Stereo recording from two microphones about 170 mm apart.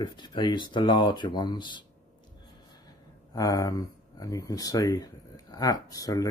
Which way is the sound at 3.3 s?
20° left (ahead or behind).